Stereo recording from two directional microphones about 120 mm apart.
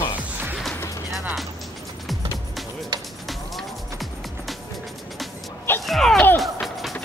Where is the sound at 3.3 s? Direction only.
Centre (ahead or behind).